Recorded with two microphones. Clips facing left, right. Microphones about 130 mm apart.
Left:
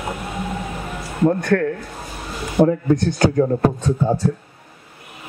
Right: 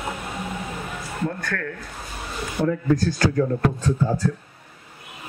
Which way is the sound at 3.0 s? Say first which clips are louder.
Left 4 dB; 25° left (ahead or behind).